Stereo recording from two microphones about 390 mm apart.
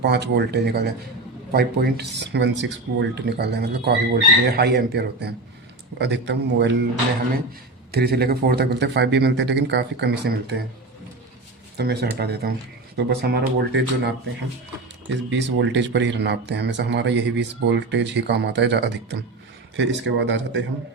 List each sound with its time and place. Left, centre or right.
0.0 s speech: right
7.9 s speech: right
11.8 s speech: right
15.1 s speech: right